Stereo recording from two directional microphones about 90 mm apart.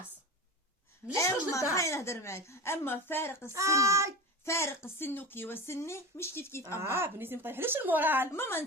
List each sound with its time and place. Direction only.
1.1 s a woman's voice: 35° left (ahead or behind)
3.5 s a child's voice: 35° right (ahead or behind)
4.4 s speech: 30° left (ahead or behind)
6.7 s a woman's voice: 30° right (ahead or behind)
8.3 s speech: 25° left (ahead or behind)